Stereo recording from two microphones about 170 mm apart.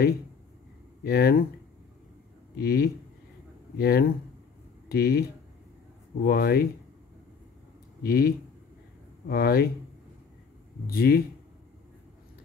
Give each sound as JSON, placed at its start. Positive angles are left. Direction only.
{"t": 1.0, "sound": "speech", "side_deg": 65}
{"t": 2.5, "sound": "speech", "side_deg": 65}
{"t": 6.2, "sound": "speech", "side_deg": 65}
{"t": 8.0, "sound": "speech", "side_deg": 60}
{"t": 10.9, "sound": "speech", "side_deg": 65}